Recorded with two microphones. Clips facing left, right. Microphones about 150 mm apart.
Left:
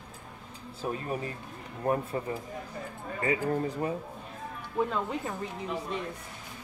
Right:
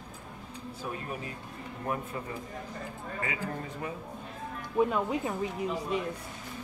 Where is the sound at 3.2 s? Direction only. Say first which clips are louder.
Left 8 dB; 35° left (ahead or behind).